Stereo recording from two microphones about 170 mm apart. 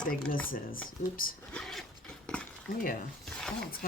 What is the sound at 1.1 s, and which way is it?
Speech, 55° left (ahead or behind).